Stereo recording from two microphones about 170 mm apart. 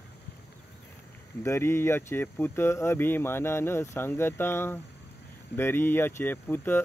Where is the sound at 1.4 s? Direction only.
15° left (ahead or behind).